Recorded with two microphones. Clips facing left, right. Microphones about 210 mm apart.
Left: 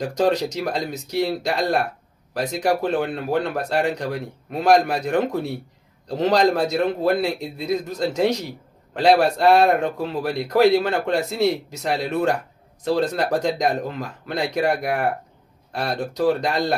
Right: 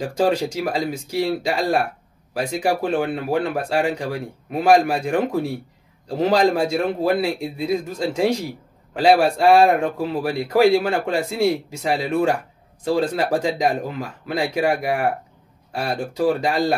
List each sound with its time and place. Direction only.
0.0 s a man's voice: 10° right (ahead or behind)